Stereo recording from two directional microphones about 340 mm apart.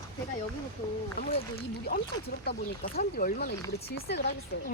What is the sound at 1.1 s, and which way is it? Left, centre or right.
Speech, left.